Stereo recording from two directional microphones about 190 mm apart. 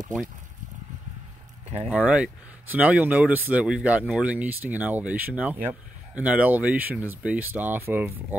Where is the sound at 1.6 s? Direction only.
35° right (ahead or behind).